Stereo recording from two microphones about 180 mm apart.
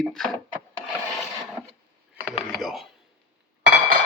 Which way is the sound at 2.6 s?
Centre (ahead or behind).